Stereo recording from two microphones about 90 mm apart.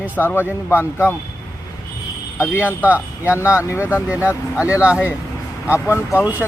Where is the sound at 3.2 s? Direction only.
30° left (ahead or behind).